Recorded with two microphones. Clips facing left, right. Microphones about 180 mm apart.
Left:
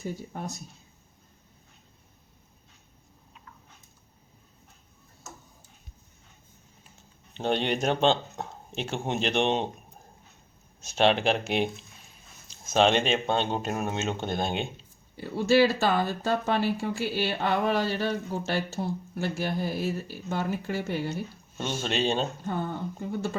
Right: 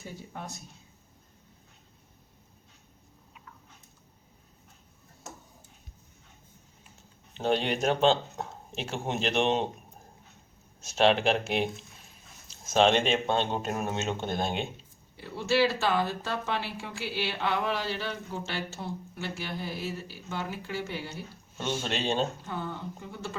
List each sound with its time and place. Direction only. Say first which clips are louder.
7.3 s speech: left 1 dB; 5° right (ahead or behind)
10.8 s speech: even; centre (ahead or behind)
15.1 s speech: left 5 dB; 45° left (ahead or behind)
21.6 s speech: left 3 dB; centre (ahead or behind)
22.4 s speech: left 5 dB; 50° left (ahead or behind)